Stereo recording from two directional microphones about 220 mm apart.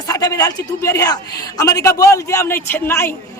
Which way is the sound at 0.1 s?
15° left (ahead or behind).